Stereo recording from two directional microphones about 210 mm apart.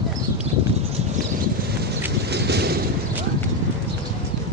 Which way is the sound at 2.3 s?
50° right (ahead or behind).